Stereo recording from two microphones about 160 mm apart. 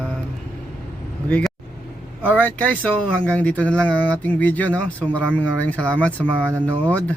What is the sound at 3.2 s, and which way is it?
Speech, 5° left (ahead or behind).